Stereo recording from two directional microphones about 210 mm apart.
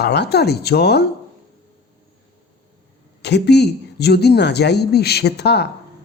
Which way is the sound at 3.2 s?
55° left (ahead or behind).